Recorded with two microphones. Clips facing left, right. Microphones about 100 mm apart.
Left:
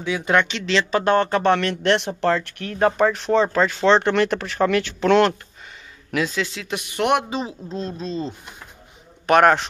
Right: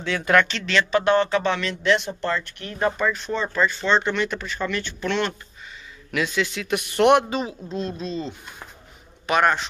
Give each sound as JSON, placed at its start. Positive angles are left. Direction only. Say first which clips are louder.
{"t": 0.2, "sound": "speech", "louder": "right 2 dB", "side_deg": 20}
{"t": 1.0, "sound": "speech", "louder": "left 2 dB", "side_deg": 50}
{"t": 6.1, "sound": "a woman's voice", "louder": "left 1 dB", "side_deg": 35}
{"t": 7.0, "sound": "speech", "louder": "right 4 dB", "side_deg": 5}
{"t": 7.2, "sound": "a woman's voice", "louder": "even", "side_deg": 25}
{"t": 9.2, "sound": "a man's voice", "louder": "left 5 dB", "side_deg": 60}